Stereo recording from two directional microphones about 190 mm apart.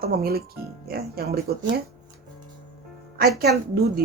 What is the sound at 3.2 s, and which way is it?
Speech, 55° right (ahead or behind).